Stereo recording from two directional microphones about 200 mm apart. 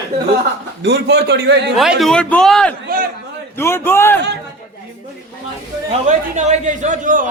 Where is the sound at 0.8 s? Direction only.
55° right (ahead or behind).